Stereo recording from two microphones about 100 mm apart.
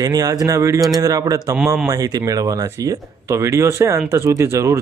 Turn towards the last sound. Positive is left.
turn(degrees=-30)  # may be behind; listen again after turning